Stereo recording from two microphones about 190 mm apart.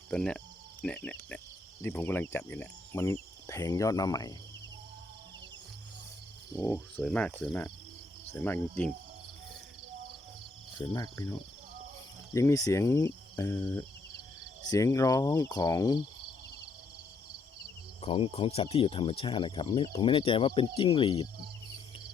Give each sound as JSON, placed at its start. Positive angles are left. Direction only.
{"t": 0.1, "sound": "speech", "side_deg": 5}
{"t": 1.8, "sound": "cricket", "side_deg": 10}
{"t": 6.6, "sound": "cricket", "side_deg": 10}
{"t": 6.9, "sound": "speech", "side_deg": 5}
{"t": 8.3, "sound": "cricket", "side_deg": 10}
{"t": 10.8, "sound": "speech", "side_deg": 20}
{"t": 12.3, "sound": "cricket", "side_deg": 15}
{"t": 18.0, "sound": "speech", "side_deg": 30}